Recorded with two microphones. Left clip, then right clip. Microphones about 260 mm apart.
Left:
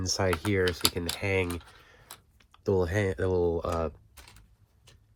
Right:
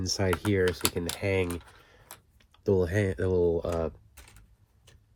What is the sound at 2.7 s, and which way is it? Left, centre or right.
Speech, centre.